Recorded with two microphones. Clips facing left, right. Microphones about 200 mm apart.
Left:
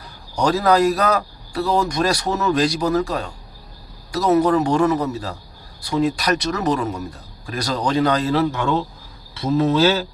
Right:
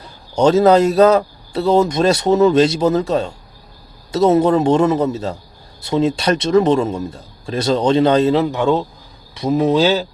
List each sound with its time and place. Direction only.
0.3 s speech: 25° right (ahead or behind)
9.3 s cricket: 15° right (ahead or behind)